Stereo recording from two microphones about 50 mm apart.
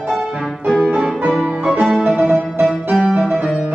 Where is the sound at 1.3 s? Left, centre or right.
Centre.